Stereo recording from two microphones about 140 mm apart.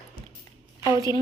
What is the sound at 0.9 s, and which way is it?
Speech, 25° right (ahead or behind).